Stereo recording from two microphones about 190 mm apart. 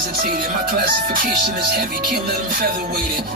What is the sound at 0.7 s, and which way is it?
Music, 50° right (ahead or behind).